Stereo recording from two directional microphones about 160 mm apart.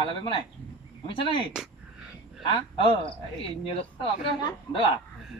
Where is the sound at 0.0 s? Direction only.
35° left (ahead or behind).